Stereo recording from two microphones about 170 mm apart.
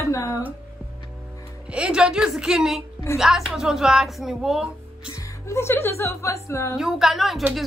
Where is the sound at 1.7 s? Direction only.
5° right (ahead or behind).